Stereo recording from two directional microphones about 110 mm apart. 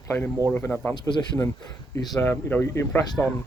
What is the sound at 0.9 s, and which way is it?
Speech, 40° left (ahead or behind).